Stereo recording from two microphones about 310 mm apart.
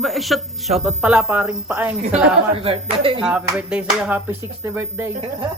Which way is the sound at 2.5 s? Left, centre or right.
Centre.